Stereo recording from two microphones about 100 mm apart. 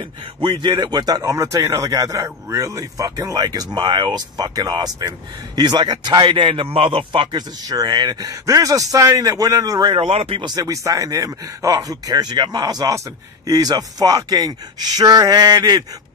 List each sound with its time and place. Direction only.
0.4 s a man's voice: 45° right (ahead or behind)
6.4 s a man's voice: 60° right (ahead or behind); by 8.3 s 45° right (ahead or behind)
8.3 s speech: 35° right (ahead or behind)
9.9 s speech: 65° right (ahead or behind)
10.4 s speech: 40° right (ahead or behind)